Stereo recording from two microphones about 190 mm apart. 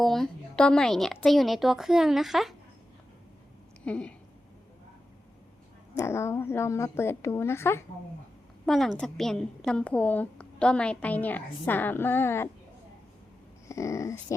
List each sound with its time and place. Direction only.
0.0 s a woman's voice: centre (ahead or behind)
3.8 s a woman's voice: 5° left (ahead or behind)
5.9 s a woman's voice: 15° left (ahead or behind)
8.6 s a woman's voice: centre (ahead or behind)
13.7 s a woman's voice: 15° left (ahead or behind)